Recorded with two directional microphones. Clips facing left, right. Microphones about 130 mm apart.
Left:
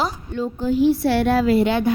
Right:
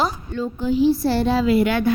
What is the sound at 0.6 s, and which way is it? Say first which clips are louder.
Speech: even; 50° left (ahead or behind).